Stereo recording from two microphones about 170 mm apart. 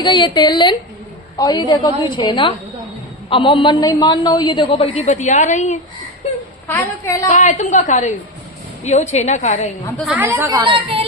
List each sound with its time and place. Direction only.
0.0 s a man's voice: 25° left (ahead or behind); by 5.8 s 45° left (ahead or behind)
6.7 s a woman's voice: 15° left (ahead or behind)
7.3 s a woman's voice: 45° left (ahead or behind)
10.0 s speech: 5° right (ahead or behind)
10.2 s speech: 15° right (ahead or behind)
10.6 s speech: 30° right (ahead or behind)